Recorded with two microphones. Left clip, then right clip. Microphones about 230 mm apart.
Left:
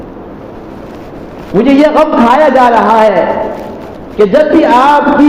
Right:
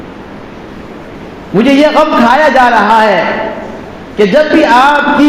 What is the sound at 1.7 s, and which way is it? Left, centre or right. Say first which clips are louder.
Speech: even; right.